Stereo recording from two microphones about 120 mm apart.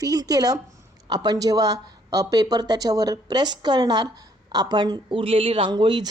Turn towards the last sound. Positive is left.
turn(degrees=-40)  # may be behind; listen again after turning